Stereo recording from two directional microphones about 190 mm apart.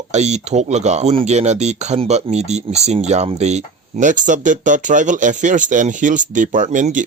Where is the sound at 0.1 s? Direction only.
35° right (ahead or behind).